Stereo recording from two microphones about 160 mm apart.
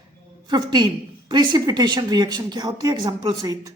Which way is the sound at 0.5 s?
25° right (ahead or behind).